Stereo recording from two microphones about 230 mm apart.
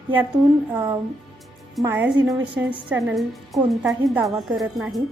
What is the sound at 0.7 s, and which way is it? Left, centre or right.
A woman's voice, centre.